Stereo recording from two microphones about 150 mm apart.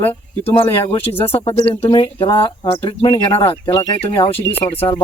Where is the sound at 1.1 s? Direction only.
30° left (ahead or behind).